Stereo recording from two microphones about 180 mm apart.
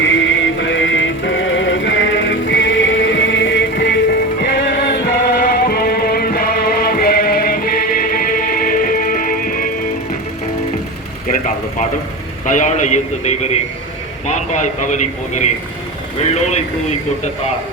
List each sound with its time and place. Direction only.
0.0 s music: 90° left; by 9.6 s 50° left (ahead or behind)
11.3 s a sound: 45° left (ahead or behind)
12.5 s a man's voice: 45° left (ahead or behind)